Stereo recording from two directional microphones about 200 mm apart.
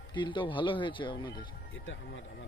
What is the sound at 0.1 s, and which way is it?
Speech, 25° left (ahead or behind).